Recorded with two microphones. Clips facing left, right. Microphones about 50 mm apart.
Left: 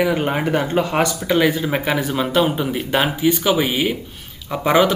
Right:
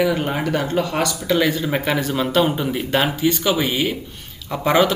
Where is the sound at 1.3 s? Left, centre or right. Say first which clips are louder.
Even; centre.